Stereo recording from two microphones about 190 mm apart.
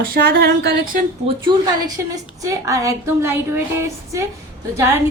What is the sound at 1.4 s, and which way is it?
A woman's voice, 20° right (ahead or behind).